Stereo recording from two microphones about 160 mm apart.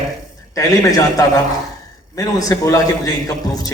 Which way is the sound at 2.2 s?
20° left (ahead or behind).